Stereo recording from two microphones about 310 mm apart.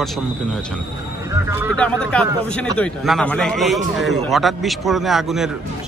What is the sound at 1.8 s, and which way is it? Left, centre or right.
A man's voice, centre.